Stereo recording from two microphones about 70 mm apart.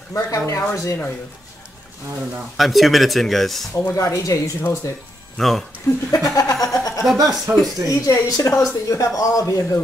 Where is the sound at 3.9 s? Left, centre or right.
Left.